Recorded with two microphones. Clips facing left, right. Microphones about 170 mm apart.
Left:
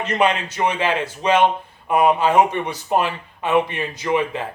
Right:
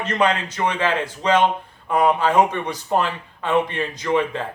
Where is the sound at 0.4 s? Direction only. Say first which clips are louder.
Left 1 dB; 10° left (ahead or behind).